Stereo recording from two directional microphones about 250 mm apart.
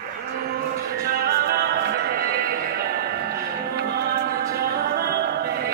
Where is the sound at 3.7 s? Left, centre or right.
Right.